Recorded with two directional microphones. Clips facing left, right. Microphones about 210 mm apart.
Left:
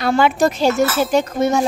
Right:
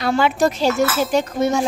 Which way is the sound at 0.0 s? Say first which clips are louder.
Left 2 dB; 55° left (ahead or behind).